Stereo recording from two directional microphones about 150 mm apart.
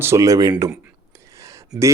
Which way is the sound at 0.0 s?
20° right (ahead or behind).